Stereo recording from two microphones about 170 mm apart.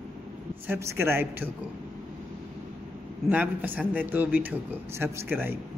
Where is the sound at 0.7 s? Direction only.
15° right (ahead or behind).